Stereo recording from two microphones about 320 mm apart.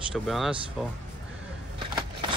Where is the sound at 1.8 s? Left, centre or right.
Centre.